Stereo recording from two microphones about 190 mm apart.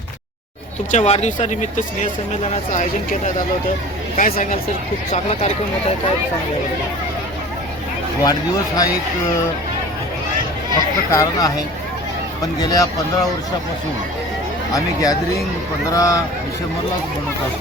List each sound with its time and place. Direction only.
0.9 s speech: 35° left (ahead or behind)
4.2 s speech: 45° left (ahead or behind)
5.1 s speech: 35° left (ahead or behind)
8.2 s speech: 20° left (ahead or behind)
10.8 s speech: 20° left (ahead or behind)
16.0 s speech: 15° left (ahead or behind)